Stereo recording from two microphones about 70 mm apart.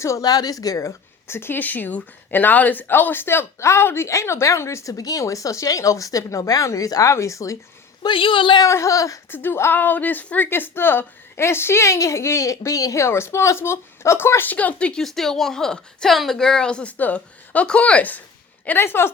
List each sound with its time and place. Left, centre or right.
0.2 s speech: left
1.3 s a woman's voice: left
7.1 s speech: left
8.0 s a woman's voice: left
8.6 s speech: left
9.3 s a woman's voice: left; by 15.0 s centre
15.0 s a woman's voice: centre
18.8 s a woman's voice: left